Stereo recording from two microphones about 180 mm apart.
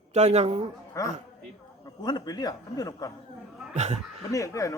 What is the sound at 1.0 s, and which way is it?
A man's voice, 20° left (ahead or behind).